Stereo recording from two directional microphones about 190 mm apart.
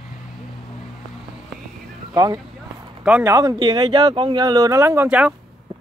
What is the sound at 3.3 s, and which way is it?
Speech, 15° right (ahead or behind).